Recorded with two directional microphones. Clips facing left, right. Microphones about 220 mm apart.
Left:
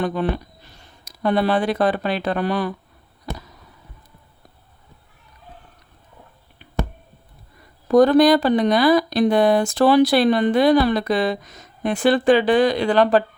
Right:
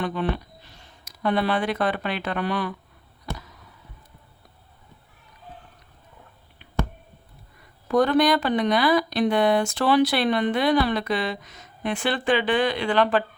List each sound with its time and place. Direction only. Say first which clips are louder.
0.0 s speech: left 4 dB; 40° left (ahead or behind)
3.3 s a sound: left 3 dB; 35° left (ahead or behind)
7.9 s speech: left 6 dB; 40° left (ahead or behind)